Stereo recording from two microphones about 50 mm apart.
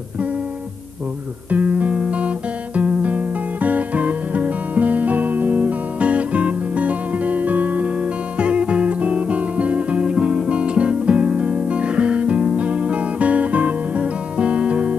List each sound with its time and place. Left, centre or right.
1.5 s music: right